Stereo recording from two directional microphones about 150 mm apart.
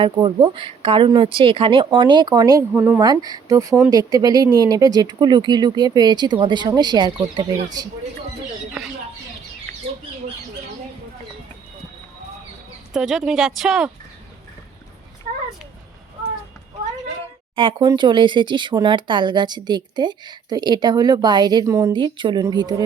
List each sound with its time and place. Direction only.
0.0 s speech: 30° right (ahead or behind); by 3.0 s 15° right (ahead or behind)
3.0 s speech: 25° right (ahead or behind)
8.8 s a sound: 5° right (ahead or behind)
12.9 s speech: 5° right (ahead or behind)
15.3 s a sound: 65° right (ahead or behind)
17.5 s speech: 35° right (ahead or behind)
21.9 s speech: 30° right (ahead or behind)